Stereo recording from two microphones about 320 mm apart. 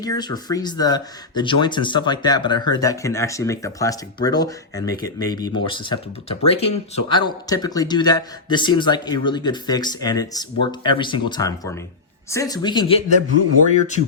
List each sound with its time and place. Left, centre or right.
0.0 s speech: centre